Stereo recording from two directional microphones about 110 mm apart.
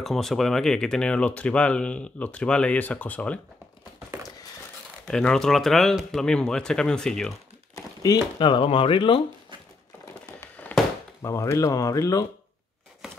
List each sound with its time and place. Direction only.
0.0 s speech: centre (ahead or behind)
5.0 s speech: 5° left (ahead or behind)
7.7 s speech: 35° left (ahead or behind)
10.7 s a sound: 15° left (ahead or behind)
11.2 s speech: 30° left (ahead or behind)